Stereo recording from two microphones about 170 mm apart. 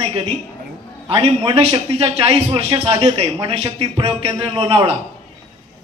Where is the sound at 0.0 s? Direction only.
35° right (ahead or behind).